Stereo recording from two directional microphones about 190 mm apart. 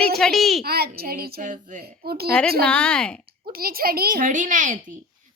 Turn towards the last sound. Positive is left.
turn(degrees=-45)  # may be behind; listen again after turning